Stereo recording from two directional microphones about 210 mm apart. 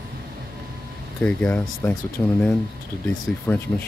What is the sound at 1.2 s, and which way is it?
Speech, 5° left (ahead or behind).